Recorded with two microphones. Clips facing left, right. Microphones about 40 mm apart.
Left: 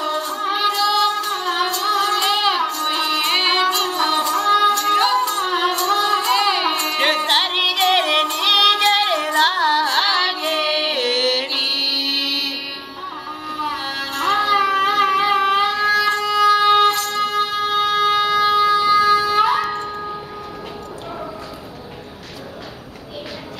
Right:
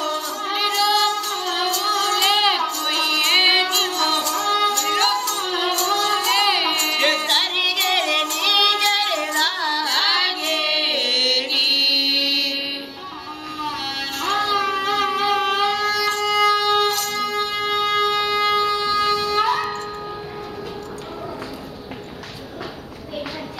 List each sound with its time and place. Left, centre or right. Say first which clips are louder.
0.0 s music: left 3 dB; centre
2.2 s child singing: even; centre
2.9 s music: left 1 dB; centre
3.3 s music: right 2 dB; centre
3.9 s music: left 3 dB; centre
5.9 s child singing: left 2 dB; centre
6.3 s music: left 1 dB; centre
7.0 s music: left 3 dB; centre
10.0 s carnatic music: left 2 dB; centre
10.8 s music: left 2 dB; centre
13.6 s music: left 2 dB; centre
17.4 s wind instrument: left 3 dB; left
19.3 s music: left 3 dB; centre